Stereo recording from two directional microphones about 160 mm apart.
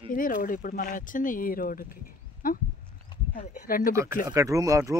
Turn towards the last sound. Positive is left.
turn(degrees=-20)  # may be behind; listen again after turning